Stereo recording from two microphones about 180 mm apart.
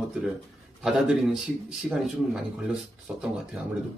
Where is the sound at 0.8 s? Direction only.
Centre (ahead or behind).